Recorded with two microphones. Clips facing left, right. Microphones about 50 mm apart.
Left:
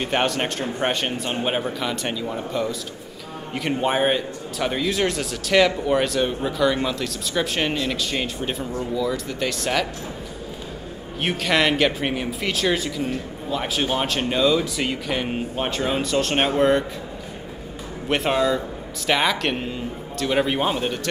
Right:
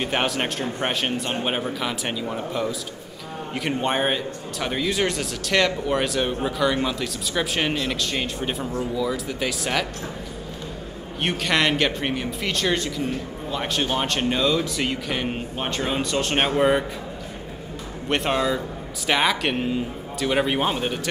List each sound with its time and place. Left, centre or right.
0.0 s speech: centre
11.1 s speech: centre
18.0 s speech: centre